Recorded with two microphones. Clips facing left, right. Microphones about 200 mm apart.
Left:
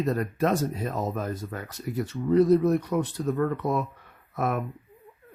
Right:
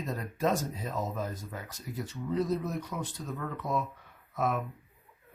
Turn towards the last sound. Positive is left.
turn(degrees=65)  # may be behind; listen again after turning